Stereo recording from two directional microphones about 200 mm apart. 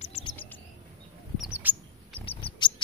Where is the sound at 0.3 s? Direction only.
10° left (ahead or behind).